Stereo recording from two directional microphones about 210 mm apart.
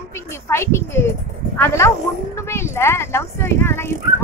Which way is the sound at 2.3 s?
10° left (ahead or behind).